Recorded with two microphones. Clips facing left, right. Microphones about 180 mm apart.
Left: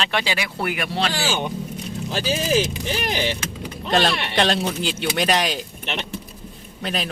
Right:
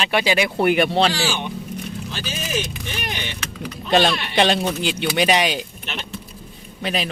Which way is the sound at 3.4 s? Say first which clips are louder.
Even; 20° left (ahead or behind).